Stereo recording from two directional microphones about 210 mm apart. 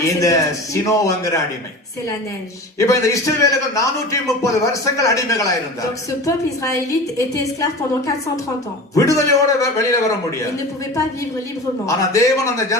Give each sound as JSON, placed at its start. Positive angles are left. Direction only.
{"t": 0.0, "sound": "a man's voice", "side_deg": 15}
{"t": 2.7, "sound": "a man's voice", "side_deg": 15}
{"t": 11.9, "sound": "a man's voice", "side_deg": 15}